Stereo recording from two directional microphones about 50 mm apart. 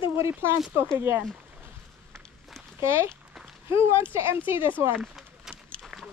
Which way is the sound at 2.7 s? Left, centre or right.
Right.